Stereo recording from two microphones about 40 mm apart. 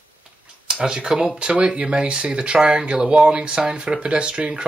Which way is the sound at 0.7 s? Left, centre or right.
Centre.